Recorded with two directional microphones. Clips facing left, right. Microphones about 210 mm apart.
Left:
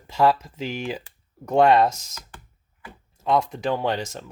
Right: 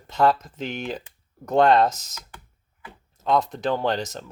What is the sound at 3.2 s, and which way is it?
Speech, 5° left (ahead or behind).